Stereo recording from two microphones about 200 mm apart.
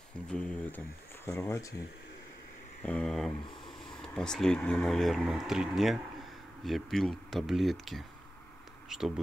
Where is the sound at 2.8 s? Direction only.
5° left (ahead or behind).